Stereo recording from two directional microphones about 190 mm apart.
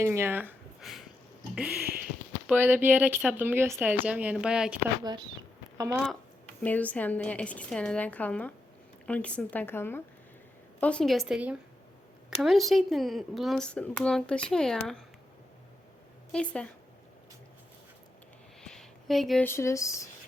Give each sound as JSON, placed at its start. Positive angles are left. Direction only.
{"t": 0.0, "sound": "speech", "side_deg": -15}
{"t": 1.9, "sound": "a sound", "side_deg": -50}
{"t": 2.5, "sound": "speech", "side_deg": -10}
{"t": 5.7, "sound": "speech", "side_deg": -15}
{"t": 6.6, "sound": "speech", "side_deg": 10}
{"t": 16.3, "sound": "speech", "side_deg": 5}
{"t": 18.6, "sound": "a sound", "side_deg": 0}
{"t": 19.5, "sound": "speech", "side_deg": 15}